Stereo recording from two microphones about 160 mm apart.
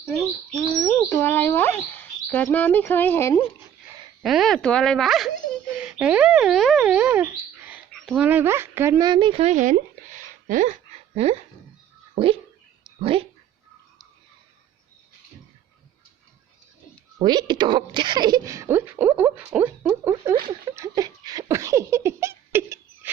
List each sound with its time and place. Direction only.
0.5 s bird: 15° left (ahead or behind)
4.2 s speech: centre (ahead or behind)
7.9 s speech: centre (ahead or behind)
9.0 s a sound: 30° right (ahead or behind)
12.1 s speech: 35° right (ahead or behind)
17.2 s speech: 25° right (ahead or behind)
20.5 s giggle: 20° right (ahead or behind)